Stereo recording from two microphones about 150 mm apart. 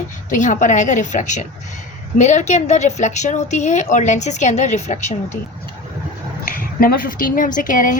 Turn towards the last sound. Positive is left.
turn(degrees=60)  # may be behind; listen again after turning